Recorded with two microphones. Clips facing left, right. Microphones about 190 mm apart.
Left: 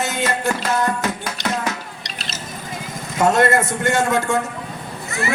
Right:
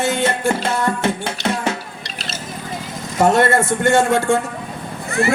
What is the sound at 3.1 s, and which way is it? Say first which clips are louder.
A woman's voice: right 2 dB; 25° right (ahead or behind).